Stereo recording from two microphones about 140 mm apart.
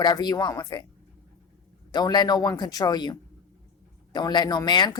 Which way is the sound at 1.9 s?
30° left (ahead or behind).